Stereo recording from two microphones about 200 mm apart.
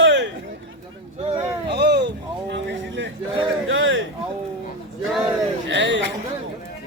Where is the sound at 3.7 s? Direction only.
75° right (ahead or behind).